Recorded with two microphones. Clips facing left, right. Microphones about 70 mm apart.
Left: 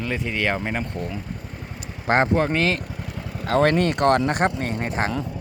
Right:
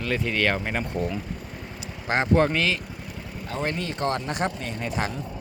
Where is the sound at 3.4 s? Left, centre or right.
Left.